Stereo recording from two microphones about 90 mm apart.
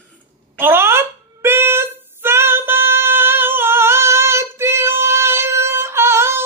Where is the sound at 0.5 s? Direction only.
25° right (ahead or behind).